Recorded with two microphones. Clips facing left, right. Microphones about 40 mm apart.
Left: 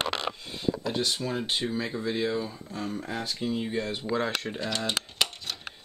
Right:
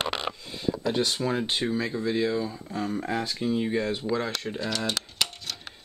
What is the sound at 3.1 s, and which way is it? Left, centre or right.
Speech, centre.